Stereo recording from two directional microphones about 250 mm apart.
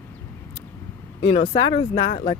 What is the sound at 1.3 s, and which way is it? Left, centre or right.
Speech, left.